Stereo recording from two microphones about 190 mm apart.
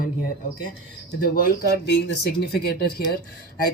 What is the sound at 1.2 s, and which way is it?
Speech, 50° left (ahead or behind).